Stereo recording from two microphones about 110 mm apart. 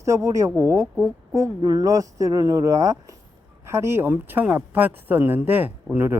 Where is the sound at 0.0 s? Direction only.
30° right (ahead or behind).